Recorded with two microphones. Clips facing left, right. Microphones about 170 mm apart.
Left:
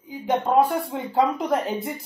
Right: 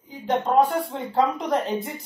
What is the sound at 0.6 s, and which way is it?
Speech, 5° left (ahead or behind).